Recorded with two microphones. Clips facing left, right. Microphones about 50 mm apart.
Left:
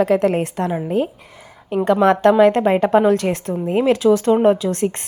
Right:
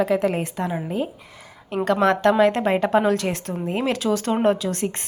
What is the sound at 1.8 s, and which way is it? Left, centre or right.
A woman's voice, left.